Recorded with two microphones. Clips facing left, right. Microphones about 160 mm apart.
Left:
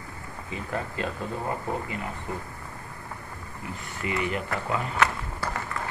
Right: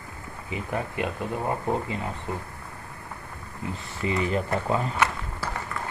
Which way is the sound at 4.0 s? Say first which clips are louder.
Right 3 dB; 30° right (ahead or behind).